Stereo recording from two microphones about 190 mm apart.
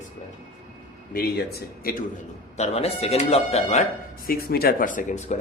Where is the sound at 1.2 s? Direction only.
55° left (ahead or behind).